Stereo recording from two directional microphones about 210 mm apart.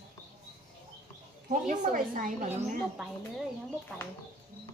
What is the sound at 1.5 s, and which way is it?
A woman's voice, 40° right (ahead or behind).